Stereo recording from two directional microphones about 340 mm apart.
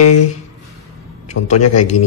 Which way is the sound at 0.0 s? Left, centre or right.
Left.